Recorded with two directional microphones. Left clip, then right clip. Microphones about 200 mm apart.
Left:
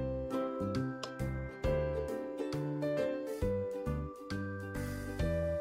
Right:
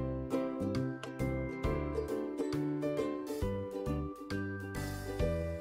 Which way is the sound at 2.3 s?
5° right (ahead or behind).